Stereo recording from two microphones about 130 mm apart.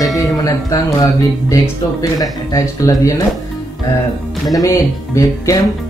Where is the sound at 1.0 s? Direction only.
30° left (ahead or behind).